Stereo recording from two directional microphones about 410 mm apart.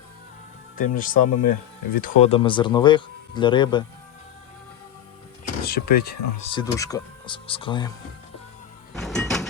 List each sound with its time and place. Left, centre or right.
0.8 s speech: centre
5.6 s speech: left
9.0 s music: centre